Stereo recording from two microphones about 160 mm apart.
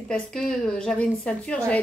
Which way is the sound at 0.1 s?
5° left (ahead or behind).